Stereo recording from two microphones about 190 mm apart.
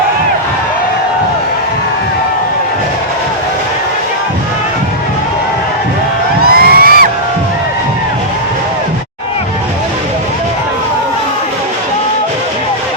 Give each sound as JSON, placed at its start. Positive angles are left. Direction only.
{"t": 6.4, "sound": "crowd", "side_deg": -55}